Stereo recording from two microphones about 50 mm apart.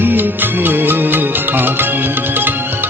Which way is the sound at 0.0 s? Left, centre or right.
Right.